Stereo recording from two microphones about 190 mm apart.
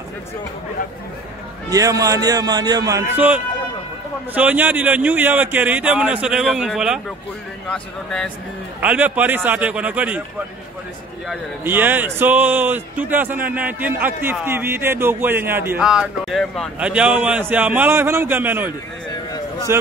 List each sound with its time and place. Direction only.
1.7 s a man's voice: 20° right (ahead or behind)
3.2 s a man's voice: 5° right (ahead or behind)
8.8 s a man's voice: 10° right (ahead or behind)
11.6 s a man's voice: 10° right (ahead or behind)
19.7 s a man's voice: 15° right (ahead or behind)